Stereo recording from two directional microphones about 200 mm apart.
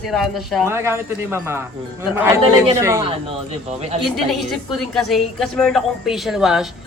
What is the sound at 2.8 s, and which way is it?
Speech, 15° right (ahead or behind).